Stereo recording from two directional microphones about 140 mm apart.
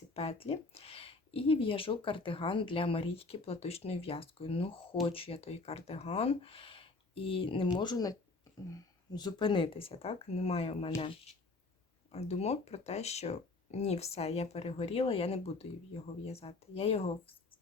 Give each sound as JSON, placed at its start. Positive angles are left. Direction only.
{"t": 0.1, "sound": "speech", "side_deg": 45}
{"t": 12.1, "sound": "speech", "side_deg": 50}